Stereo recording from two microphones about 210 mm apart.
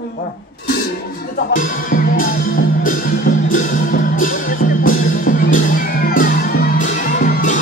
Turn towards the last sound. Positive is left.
turn(degrees=40)  # may be behind; listen again after turning